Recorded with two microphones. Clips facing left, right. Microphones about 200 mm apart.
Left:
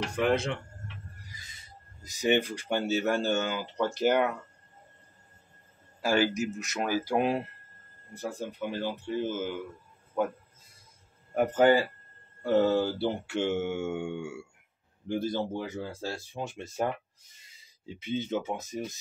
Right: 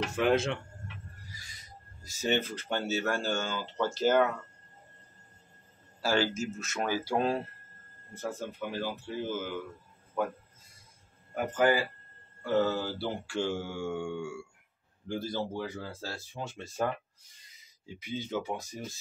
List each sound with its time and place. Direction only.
0.1 s speech: centre (ahead or behind)
1.4 s speech: 20° left (ahead or behind)
5.9 s a man's voice: 15° left (ahead or behind)
11.3 s speech: 30° left (ahead or behind)
13.0 s a man's voice: 20° left (ahead or behind)